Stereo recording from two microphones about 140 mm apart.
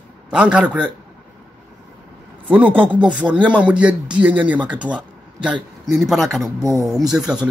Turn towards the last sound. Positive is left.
turn(degrees=-5)  # may be behind; listen again after turning